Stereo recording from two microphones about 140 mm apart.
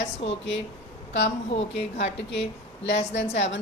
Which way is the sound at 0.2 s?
45° left (ahead or behind).